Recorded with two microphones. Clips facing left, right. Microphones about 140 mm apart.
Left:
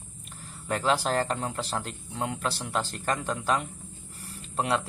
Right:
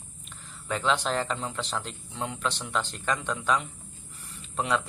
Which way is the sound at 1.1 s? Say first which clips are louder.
Left 2 dB; 45° left (ahead or behind).